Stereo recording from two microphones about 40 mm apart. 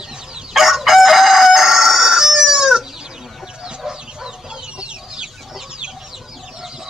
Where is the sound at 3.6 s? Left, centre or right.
Centre.